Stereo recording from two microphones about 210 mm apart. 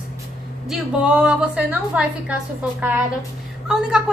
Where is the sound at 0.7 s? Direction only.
5° right (ahead or behind).